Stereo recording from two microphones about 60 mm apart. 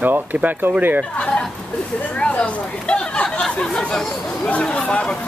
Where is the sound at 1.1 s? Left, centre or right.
Centre.